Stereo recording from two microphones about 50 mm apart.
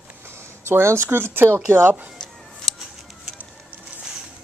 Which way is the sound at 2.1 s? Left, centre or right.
Centre.